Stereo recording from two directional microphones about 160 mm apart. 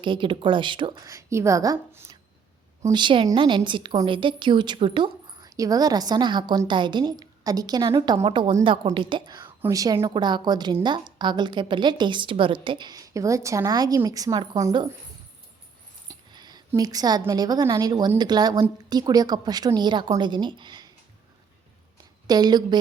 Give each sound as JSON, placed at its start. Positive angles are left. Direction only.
{"t": 0.0, "sound": "a woman's voice", "side_deg": -30}
{"t": 9.6, "sound": "a woman's voice", "side_deg": -20}
{"t": 16.0, "sound": "a woman's voice", "side_deg": -25}
{"t": 22.3, "sound": "a woman's voice", "side_deg": -25}